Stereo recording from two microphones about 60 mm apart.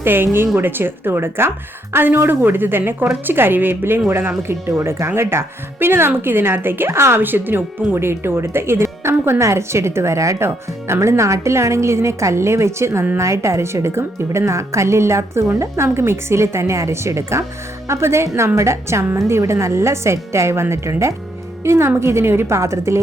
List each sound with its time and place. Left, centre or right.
0.0 s a woman's voice: right